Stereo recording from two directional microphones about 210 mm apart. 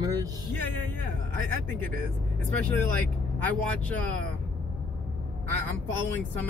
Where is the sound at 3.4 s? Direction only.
5° left (ahead or behind).